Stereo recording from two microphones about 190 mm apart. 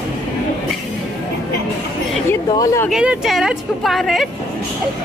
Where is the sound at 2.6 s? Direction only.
15° left (ahead or behind).